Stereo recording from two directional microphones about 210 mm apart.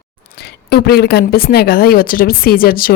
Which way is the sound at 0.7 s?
50° left (ahead or behind).